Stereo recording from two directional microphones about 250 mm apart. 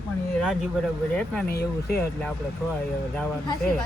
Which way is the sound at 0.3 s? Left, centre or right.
Centre.